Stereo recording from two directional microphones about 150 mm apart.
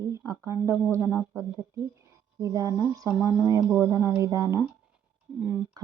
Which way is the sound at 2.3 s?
20° right (ahead or behind).